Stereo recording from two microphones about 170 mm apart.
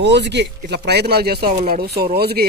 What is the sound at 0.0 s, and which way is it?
Speech, 85° right.